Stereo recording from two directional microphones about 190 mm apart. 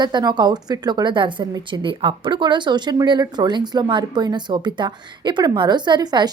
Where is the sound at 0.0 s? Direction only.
25° right (ahead or behind).